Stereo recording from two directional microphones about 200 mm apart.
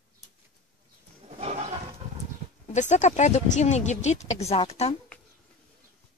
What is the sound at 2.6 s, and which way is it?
Speech, 35° left (ahead or behind).